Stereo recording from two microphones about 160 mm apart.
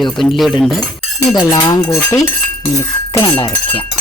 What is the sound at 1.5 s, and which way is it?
Speech, 20° left (ahead or behind).